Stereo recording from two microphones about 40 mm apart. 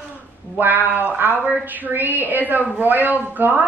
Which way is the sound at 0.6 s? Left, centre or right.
Right.